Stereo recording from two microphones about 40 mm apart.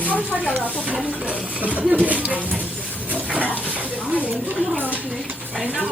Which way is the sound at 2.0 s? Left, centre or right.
Right.